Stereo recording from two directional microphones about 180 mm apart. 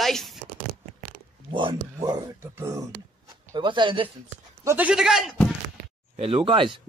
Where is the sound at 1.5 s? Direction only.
25° right (ahead or behind).